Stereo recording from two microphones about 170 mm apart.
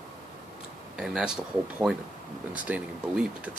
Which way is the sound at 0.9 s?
5° right (ahead or behind).